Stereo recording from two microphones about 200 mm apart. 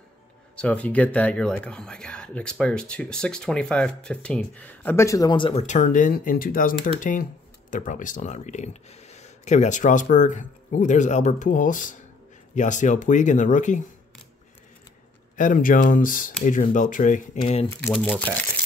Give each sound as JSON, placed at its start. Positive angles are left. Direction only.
{"t": 0.6, "sound": "speech", "side_deg": 5}
{"t": 5.7, "sound": "speech", "side_deg": 40}
{"t": 15.3, "sound": "speech", "side_deg": 40}
{"t": 17.6, "sound": "speech", "side_deg": 10}